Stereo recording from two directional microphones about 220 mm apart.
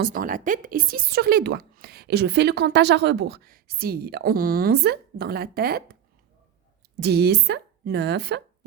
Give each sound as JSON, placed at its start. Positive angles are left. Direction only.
{"t": 0.0, "sound": "speech", "side_deg": -40}
{"t": 7.0, "sound": "speech", "side_deg": -45}